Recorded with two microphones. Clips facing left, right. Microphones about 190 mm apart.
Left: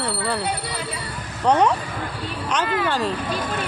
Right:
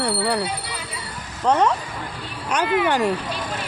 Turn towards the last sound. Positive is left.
turn(degrees=-15)  # may be behind; listen again after turning